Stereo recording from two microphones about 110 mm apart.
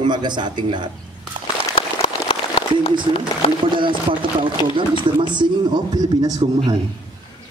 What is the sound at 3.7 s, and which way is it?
A man's voice, 50° right (ahead or behind).